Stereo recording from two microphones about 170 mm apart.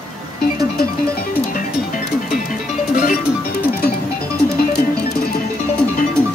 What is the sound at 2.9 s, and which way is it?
Music, 50° left (ahead or behind).